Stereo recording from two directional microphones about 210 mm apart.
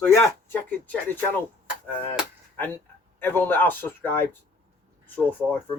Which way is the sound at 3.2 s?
10° left (ahead or behind).